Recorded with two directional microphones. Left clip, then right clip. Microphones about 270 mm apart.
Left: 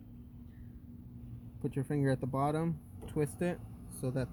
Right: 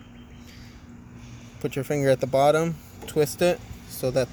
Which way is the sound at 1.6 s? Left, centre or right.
Centre.